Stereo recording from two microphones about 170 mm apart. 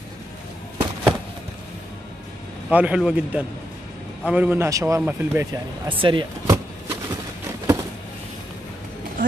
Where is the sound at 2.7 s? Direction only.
10° right (ahead or behind).